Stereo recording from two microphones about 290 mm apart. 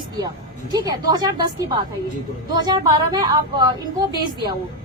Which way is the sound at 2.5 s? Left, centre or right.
Centre.